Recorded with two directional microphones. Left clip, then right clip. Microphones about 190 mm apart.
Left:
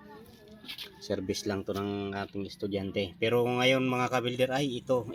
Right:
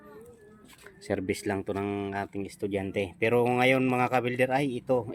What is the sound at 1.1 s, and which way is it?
Speech, 15° right (ahead or behind).